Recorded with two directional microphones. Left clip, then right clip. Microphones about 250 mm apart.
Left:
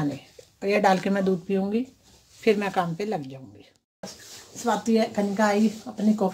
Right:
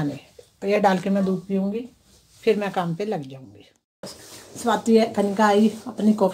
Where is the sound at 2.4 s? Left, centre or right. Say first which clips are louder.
Right 1 dB; centre.